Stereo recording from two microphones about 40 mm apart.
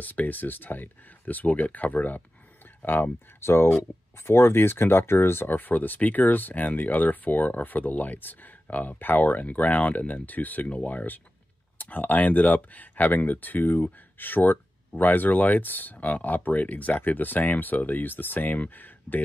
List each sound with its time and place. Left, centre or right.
0.0 s speech: left
2.8 s speech: left
5.5 s speech: left